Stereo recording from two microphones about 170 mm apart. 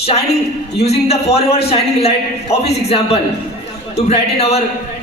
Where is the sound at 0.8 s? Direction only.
40° left (ahead or behind).